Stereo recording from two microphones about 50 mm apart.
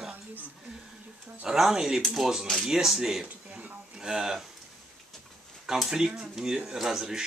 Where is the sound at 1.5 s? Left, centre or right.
Centre.